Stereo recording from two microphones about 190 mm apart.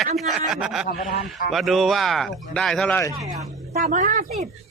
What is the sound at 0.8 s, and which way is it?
Speech, 55° left (ahead or behind).